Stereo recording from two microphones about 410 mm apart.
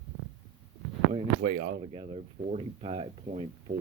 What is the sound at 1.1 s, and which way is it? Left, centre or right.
Speech, centre.